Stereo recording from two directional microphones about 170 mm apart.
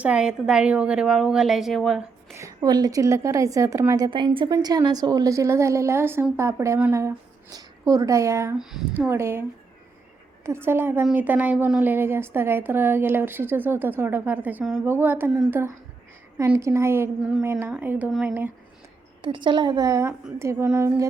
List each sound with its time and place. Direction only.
0.0 s a woman's voice: 5° right (ahead or behind)
2.3 s a woman's voice: 20° right (ahead or behind)
10.4 s a woman's voice: 15° right (ahead or behind)
19.2 s a woman's voice: 30° right (ahead or behind)